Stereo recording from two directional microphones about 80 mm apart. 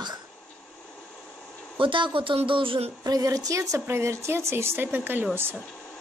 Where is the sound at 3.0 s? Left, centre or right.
Right.